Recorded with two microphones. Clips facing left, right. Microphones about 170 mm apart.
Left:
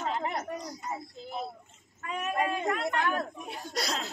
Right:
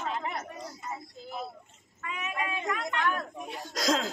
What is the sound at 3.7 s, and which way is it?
Speech, 90° right.